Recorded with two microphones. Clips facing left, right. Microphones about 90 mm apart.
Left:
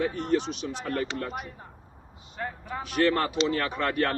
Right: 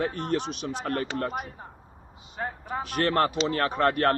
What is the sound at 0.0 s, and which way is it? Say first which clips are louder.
Speech: left 1 dB; 55° right (ahead or behind).